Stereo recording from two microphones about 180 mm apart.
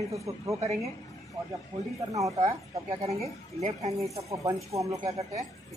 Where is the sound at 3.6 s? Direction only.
35° right (ahead or behind).